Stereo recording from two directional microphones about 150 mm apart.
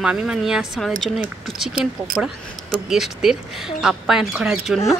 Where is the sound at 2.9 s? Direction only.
Centre (ahead or behind).